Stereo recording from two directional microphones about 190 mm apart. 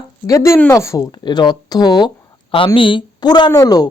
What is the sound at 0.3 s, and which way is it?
A woman's voice, 15° left (ahead or behind).